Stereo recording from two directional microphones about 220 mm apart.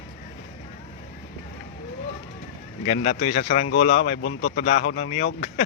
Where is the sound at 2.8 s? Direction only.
30° left (ahead or behind).